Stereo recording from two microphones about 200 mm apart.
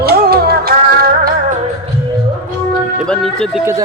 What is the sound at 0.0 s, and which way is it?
Music, 50° right (ahead or behind).